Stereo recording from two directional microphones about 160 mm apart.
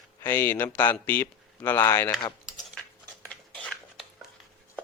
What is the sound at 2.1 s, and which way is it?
Speech, 25° left (ahead or behind).